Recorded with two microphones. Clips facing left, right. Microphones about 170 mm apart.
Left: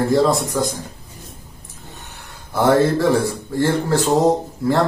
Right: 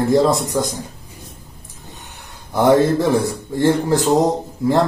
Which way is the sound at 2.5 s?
20° right (ahead or behind).